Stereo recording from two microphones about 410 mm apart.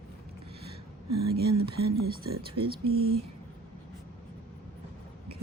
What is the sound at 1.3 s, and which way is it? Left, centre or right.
Speech, right.